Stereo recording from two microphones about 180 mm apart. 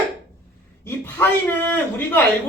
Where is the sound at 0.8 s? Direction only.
10° left (ahead or behind).